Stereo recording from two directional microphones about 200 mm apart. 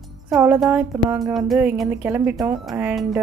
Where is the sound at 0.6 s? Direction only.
10° right (ahead or behind).